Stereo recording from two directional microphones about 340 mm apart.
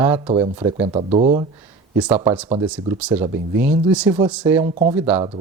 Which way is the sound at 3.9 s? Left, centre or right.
Centre.